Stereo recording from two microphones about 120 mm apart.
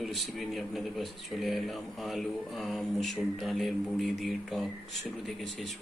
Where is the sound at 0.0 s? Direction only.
Centre (ahead or behind).